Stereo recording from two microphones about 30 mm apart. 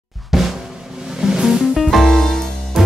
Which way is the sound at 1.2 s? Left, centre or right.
Centre.